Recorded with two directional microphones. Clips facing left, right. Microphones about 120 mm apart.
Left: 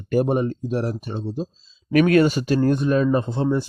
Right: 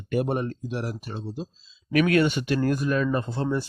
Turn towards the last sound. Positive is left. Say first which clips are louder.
# left 5 dB
turn(degrees=15)  # may be behind; listen again after turning